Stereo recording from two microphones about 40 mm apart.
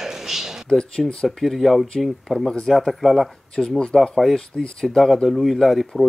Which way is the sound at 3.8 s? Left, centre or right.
Centre.